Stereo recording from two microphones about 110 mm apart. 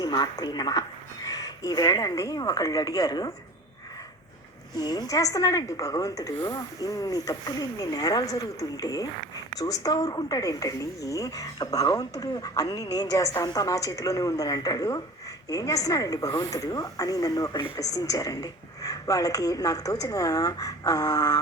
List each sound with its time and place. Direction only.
0.0 s speech: 40° left (ahead or behind)
4.8 s speech: 35° left (ahead or behind)